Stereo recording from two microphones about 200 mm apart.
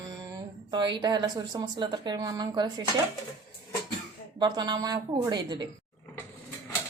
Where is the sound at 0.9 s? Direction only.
20° right (ahead or behind).